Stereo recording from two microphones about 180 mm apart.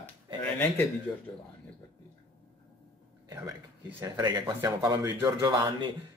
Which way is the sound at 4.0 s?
20° right (ahead or behind).